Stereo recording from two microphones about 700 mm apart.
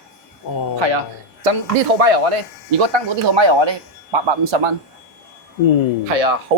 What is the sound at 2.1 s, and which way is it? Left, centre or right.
A man's voice, right.